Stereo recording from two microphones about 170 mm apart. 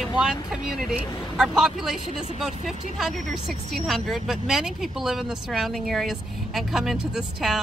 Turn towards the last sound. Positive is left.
turn(degrees=0)  # may be behind; listen again after turning